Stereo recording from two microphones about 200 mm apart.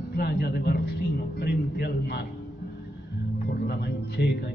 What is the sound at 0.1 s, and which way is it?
A man's voice, 55° left (ahead or behind).